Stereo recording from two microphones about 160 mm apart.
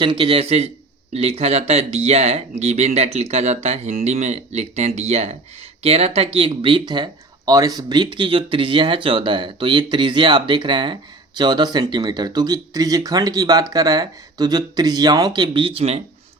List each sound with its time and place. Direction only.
0.0 s speech: 30° right (ahead or behind)